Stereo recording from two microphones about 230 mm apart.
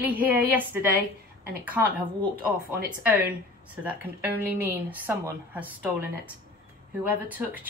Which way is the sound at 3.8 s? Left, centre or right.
Centre.